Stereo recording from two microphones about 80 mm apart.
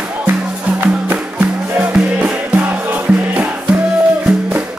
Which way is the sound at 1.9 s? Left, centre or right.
Centre.